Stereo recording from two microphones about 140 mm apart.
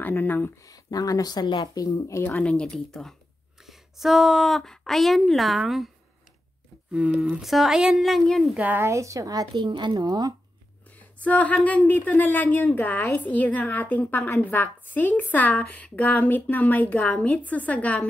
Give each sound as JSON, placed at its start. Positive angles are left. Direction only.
{"t": 0.0, "sound": "speech", "side_deg": 15}
{"t": 0.7, "sound": "speech", "side_deg": 25}
{"t": 6.9, "sound": "speech", "side_deg": -10}
{"t": 8.5, "sound": "speech", "side_deg": -15}
{"t": 11.0, "sound": "speech", "side_deg": 10}